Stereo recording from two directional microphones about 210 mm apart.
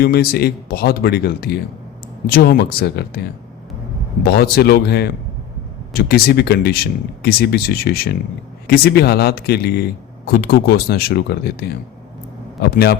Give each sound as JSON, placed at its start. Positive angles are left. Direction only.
{"t": 0.0, "sound": "speech", "side_deg": 45}
{"t": 12.7, "sound": "speech", "side_deg": 50}